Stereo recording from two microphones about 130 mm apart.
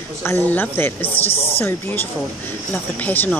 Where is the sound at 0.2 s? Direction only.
15° left (ahead or behind).